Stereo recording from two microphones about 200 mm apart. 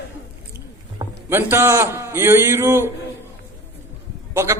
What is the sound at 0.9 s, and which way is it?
A man's voice, 10° right (ahead or behind).